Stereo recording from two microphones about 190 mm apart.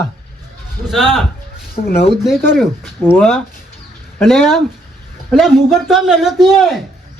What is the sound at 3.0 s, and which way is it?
A man's voice, 10° left (ahead or behind).